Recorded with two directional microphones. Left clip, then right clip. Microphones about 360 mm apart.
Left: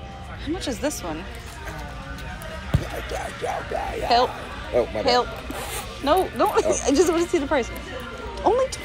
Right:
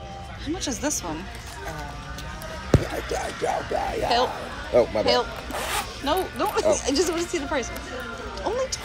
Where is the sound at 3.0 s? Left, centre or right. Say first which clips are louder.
Right 2 dB; right.